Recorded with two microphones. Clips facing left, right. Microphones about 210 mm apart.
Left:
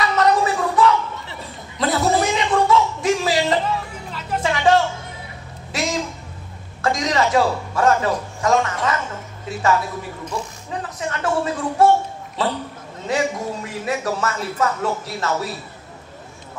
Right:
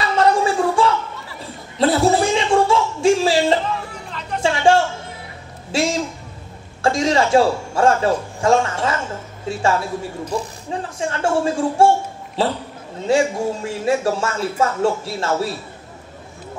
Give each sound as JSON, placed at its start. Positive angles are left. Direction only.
{"t": 0.0, "sound": "gargling", "side_deg": -30}
{"t": 1.8, "sound": "a sound", "side_deg": -30}
{"t": 4.4, "sound": "music", "side_deg": -30}
{"t": 5.7, "sound": "speech", "side_deg": -30}